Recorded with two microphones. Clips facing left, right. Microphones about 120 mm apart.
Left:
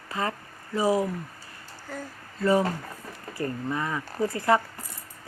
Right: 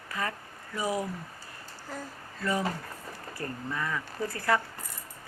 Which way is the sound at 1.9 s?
Centre (ahead or behind).